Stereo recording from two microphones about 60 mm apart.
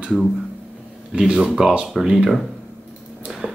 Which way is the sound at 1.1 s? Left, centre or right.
Centre.